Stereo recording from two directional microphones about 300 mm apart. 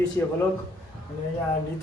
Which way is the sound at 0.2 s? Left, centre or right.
Centre.